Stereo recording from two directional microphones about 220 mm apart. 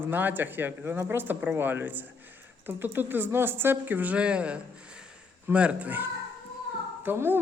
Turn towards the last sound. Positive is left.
turn(degrees=-10)  # may be behind; listen again after turning